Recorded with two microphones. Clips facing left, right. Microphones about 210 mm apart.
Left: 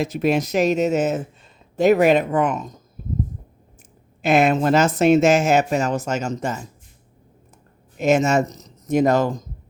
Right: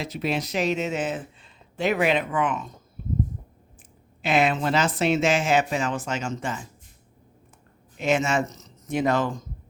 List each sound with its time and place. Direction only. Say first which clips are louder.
0.0 s speech: left 8 dB; 45° left (ahead or behind)
3.0 s a sound: left 1 dB; 40° left (ahead or behind)
4.2 s speech: left 6 dB; 45° left (ahead or behind)
7.9 s speech: left 6 dB; 45° left (ahead or behind)